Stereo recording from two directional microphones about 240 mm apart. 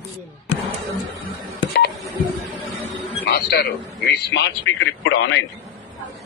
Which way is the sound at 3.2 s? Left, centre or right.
Left.